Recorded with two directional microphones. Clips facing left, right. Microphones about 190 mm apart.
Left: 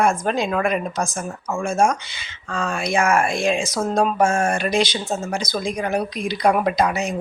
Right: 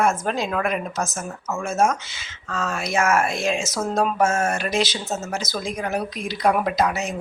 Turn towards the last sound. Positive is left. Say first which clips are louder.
# left 2 dB
turn(degrees=0)  # may be behind; listen again after turning